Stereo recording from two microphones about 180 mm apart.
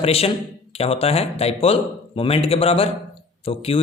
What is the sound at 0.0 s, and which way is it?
A man's voice, 35° left (ahead or behind).